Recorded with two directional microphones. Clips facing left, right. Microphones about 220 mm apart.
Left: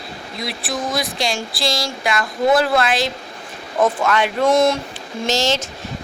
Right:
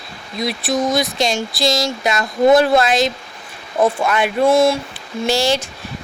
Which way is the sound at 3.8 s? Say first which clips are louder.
Right 1 dB; 15° right (ahead or behind).